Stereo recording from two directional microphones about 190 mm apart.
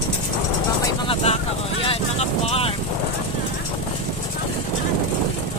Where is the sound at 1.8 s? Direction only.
30° left (ahead or behind).